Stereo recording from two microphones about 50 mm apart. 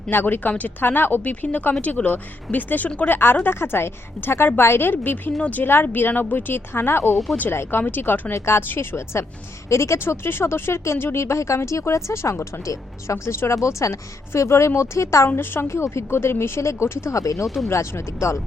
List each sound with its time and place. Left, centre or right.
0.1 s a woman's voice: left
1.2 s speech: left
3.1 s a woman's voice: left
8.3 s speech: left
8.6 s a woman's voice: left
9.6 s speech: left
10.0 s speech: left
14.8 s speech: left
15.6 s speech: left
16.0 s a woman's voice: left
16.6 s speech: left
17.4 s speech: centre
17.7 s speech: left